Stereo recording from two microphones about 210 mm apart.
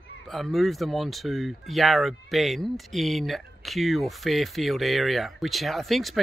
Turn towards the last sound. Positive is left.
turn(degrees=0)  # may be behind; listen again after turning